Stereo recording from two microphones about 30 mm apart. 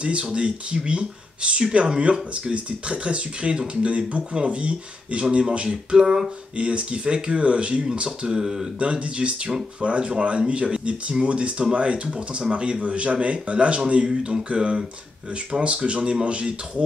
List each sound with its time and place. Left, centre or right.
0.3 s speech: right
5.5 s a sound: right
6.5 s speech: right
8.4 s speech: centre
8.7 s a man's voice: right